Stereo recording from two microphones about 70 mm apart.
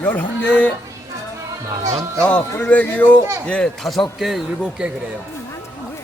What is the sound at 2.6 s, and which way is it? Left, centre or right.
Speech, left.